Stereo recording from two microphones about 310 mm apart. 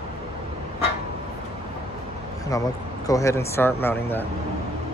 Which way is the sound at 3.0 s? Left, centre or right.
Centre.